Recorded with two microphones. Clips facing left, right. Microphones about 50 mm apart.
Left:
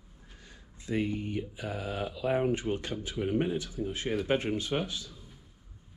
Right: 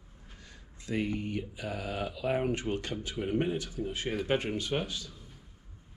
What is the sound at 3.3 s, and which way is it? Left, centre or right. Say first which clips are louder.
Speech: even; centre.